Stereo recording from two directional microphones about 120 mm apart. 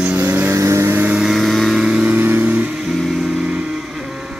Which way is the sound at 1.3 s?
Centre (ahead or behind).